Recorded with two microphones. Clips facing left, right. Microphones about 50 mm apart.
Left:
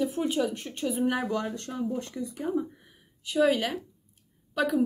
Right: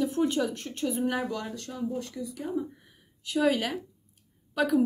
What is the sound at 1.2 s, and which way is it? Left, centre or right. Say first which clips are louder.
Speech: left 3 dB; left.